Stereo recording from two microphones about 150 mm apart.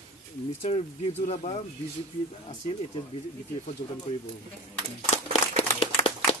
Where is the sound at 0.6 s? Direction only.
45° left (ahead or behind).